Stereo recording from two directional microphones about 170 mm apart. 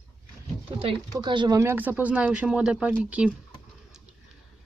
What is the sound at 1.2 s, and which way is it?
Speech, 25° right (ahead or behind).